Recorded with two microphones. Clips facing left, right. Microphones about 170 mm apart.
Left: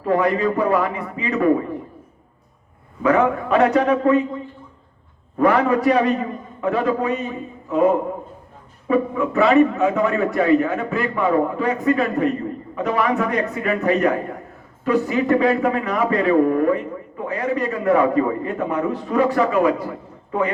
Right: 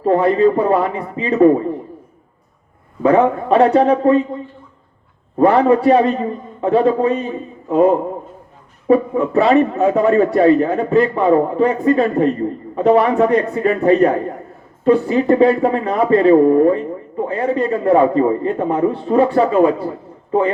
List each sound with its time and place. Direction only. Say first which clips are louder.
0.0 s speech: right 6 dB; 30° right (ahead or behind)
3.0 s speech: right 4 dB; 30° right (ahead or behind)
5.4 s speech: right 5 dB; 30° right (ahead or behind)